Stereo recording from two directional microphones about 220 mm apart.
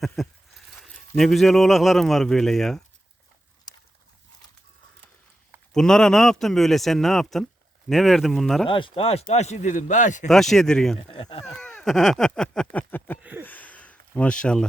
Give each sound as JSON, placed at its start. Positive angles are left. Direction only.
{"t": 0.2, "sound": "speech", "side_deg": 0}
{"t": 5.7, "sound": "speech", "side_deg": 5}
{"t": 8.6, "sound": "a man's voice", "side_deg": 25}
{"t": 10.2, "sound": "speech", "side_deg": 0}
{"t": 10.9, "sound": "speech", "side_deg": 25}
{"t": 11.4, "sound": "speech", "side_deg": 5}
{"t": 12.7, "sound": "a sound", "side_deg": 10}